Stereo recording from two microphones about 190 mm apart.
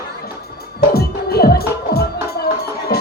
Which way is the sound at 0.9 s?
55° left (ahead or behind).